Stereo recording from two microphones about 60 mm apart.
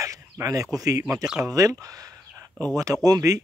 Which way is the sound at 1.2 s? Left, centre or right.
Centre.